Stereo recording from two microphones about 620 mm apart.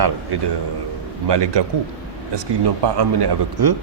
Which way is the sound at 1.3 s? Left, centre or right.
Right.